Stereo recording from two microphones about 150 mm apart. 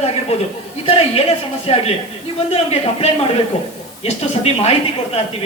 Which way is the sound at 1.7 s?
40° left (ahead or behind).